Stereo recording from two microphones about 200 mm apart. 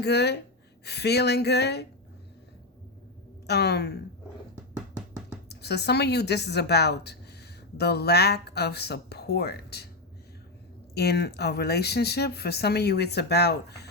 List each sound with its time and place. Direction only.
0.0 s a woman's voice: 55° left (ahead or behind)
3.4 s a woman's voice: 55° left (ahead or behind)
5.5 s a woman's voice: 55° left (ahead or behind)
10.9 s speech: 55° left (ahead or behind)